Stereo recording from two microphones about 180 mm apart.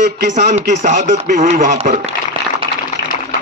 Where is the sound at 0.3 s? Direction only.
40° right (ahead or behind).